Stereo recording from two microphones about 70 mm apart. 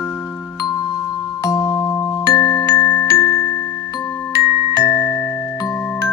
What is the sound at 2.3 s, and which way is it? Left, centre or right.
Glockenspiel, left.